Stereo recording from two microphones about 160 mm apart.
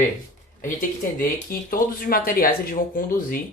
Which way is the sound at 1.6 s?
65° left (ahead or behind).